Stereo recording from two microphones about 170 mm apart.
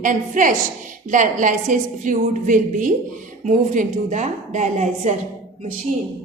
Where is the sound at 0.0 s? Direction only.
50° right (ahead or behind).